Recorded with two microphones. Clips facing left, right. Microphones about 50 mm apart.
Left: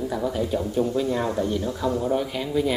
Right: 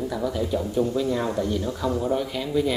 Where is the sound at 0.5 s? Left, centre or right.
Centre.